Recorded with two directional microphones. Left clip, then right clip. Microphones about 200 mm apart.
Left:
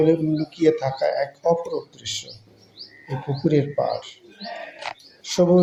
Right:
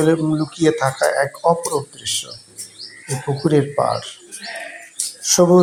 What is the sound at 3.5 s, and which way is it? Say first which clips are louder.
Speech: right 4 dB; 20° right (ahead or behind).